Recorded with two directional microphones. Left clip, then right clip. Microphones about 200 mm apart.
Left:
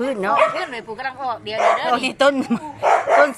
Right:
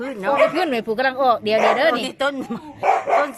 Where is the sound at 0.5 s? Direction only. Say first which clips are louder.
Right 6 dB; 55° right (ahead or behind).